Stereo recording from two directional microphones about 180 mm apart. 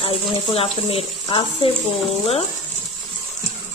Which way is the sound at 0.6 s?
30° left (ahead or behind).